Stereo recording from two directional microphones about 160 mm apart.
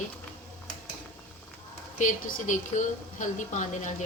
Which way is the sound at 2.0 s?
55° left (ahead or behind).